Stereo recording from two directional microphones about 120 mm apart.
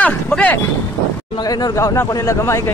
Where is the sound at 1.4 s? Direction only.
35° left (ahead or behind).